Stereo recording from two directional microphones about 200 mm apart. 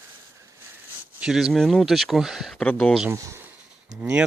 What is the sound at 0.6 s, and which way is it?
Speech, 10° right (ahead or behind).